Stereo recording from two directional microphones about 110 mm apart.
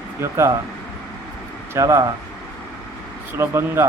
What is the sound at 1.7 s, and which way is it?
Speech, 30° right (ahead or behind).